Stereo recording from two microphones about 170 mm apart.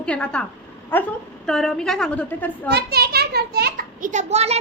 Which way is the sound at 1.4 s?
5° left (ahead or behind).